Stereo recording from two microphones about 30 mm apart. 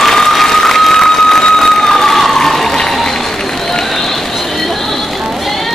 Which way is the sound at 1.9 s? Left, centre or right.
Centre.